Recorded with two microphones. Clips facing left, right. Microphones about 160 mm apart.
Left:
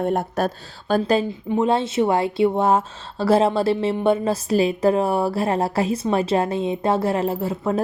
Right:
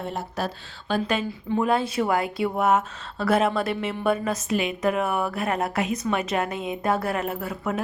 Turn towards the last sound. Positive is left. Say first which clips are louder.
# left 6 dB
turn(degrees=30)  # may be behind; listen again after turning